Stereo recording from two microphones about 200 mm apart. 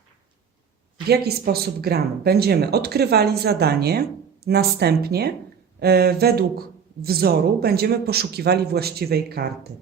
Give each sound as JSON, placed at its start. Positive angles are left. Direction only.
{"t": 1.0, "sound": "speech", "side_deg": -50}